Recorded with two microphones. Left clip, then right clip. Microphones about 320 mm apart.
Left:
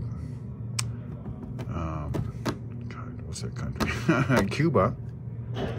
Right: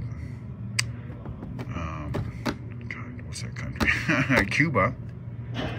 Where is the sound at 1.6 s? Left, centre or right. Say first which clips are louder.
Even; left.